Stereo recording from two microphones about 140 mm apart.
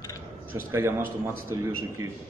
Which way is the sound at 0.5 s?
20° right (ahead or behind).